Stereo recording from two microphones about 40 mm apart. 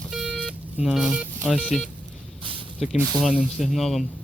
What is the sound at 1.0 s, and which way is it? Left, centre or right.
Speech, right.